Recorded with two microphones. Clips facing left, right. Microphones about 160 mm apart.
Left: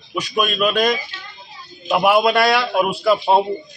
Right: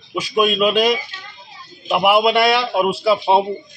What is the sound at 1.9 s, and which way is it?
Speech, 20° right (ahead or behind).